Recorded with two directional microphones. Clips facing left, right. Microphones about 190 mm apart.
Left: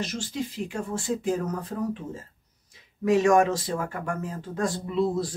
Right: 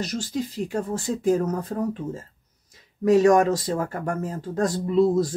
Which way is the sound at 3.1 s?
40° right (ahead or behind).